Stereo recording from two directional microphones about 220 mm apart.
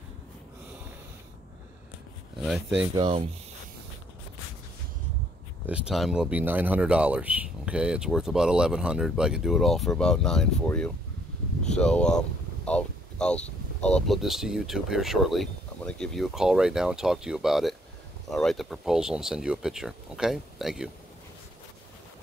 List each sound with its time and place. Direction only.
2.3 s speech: centre (ahead or behind)
2.9 s speech: 20° right (ahead or behind)
5.7 s speech: 5° right (ahead or behind)